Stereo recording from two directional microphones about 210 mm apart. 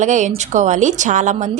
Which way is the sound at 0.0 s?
35° right (ahead or behind).